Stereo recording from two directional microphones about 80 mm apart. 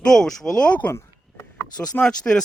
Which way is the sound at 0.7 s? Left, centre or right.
Left.